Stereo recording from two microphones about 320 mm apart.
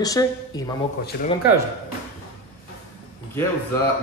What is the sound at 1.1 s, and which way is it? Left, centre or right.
Speech, left.